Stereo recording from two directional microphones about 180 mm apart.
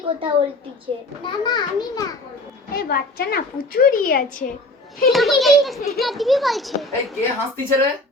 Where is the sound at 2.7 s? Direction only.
55° left (ahead or behind).